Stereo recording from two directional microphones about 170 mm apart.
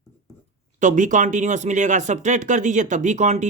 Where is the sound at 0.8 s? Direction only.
45° right (ahead or behind).